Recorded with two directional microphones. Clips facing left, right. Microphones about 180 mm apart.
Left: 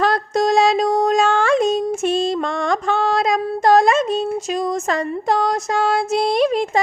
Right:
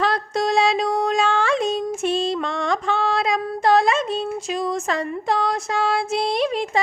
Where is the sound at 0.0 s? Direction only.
45° left (ahead or behind).